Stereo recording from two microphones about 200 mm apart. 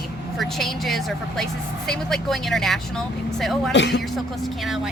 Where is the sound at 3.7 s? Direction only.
60° left (ahead or behind).